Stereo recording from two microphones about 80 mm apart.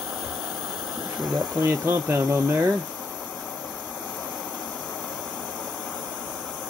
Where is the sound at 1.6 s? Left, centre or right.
Right.